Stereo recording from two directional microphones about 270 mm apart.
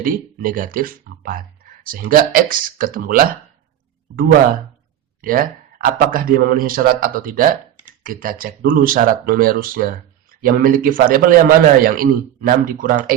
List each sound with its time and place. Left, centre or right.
0.0 s speech: right
5.2 s speech: right